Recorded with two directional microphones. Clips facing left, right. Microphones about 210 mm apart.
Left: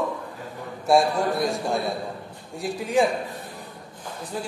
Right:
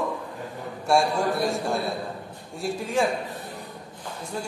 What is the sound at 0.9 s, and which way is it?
Speech, centre (ahead or behind).